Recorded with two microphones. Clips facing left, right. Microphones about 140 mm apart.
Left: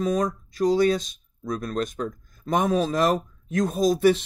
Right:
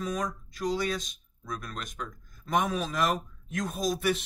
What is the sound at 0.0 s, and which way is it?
Speech, 35° left (ahead or behind).